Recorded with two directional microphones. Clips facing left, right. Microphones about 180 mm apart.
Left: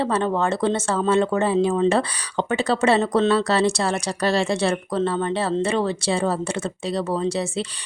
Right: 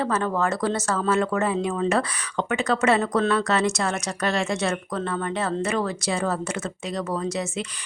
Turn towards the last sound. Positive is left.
turn(degrees=30)  # may be behind; listen again after turning